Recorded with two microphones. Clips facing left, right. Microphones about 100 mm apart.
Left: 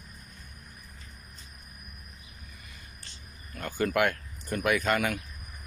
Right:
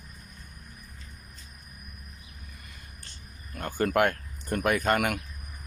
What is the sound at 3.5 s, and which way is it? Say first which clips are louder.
Speech: right 2 dB; 45° right (ahead or behind).